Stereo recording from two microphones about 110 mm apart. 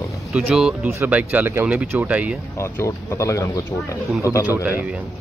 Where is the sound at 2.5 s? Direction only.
25° left (ahead or behind).